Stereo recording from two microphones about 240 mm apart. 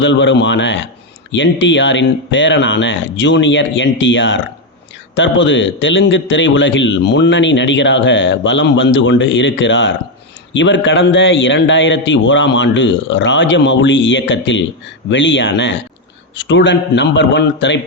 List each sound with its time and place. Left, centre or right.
0.0 s a man's voice: left